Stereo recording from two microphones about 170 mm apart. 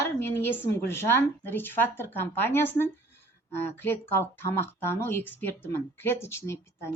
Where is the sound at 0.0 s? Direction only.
15° left (ahead or behind).